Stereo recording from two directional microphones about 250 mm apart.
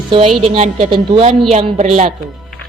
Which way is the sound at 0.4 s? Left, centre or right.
Right.